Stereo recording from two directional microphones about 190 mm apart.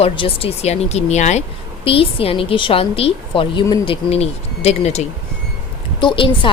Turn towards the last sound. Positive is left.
turn(degrees=25)  # may be behind; listen again after turning